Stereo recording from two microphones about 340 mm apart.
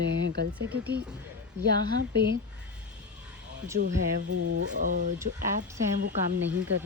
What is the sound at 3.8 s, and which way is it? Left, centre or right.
Speech, right.